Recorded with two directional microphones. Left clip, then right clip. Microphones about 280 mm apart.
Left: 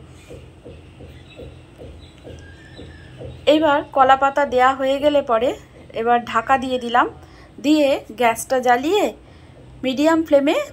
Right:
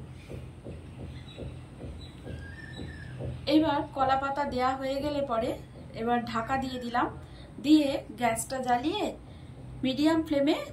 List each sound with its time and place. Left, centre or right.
3.4 s a woman's voice: left